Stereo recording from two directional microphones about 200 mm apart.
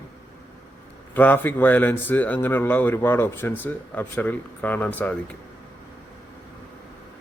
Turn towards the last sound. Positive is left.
turn(degrees=10)  # may be behind; listen again after turning